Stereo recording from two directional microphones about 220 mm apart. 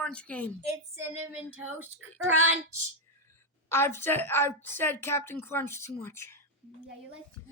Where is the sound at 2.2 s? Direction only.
65° right (ahead or behind).